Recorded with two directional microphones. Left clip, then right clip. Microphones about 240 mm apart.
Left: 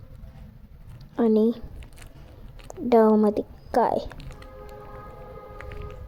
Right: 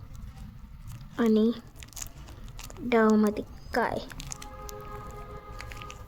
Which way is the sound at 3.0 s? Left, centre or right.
Centre.